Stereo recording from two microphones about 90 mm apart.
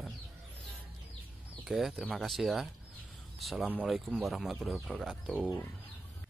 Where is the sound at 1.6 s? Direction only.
5° right (ahead or behind).